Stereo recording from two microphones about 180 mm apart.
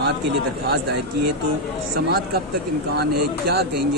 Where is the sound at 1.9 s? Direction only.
60° right (ahead or behind).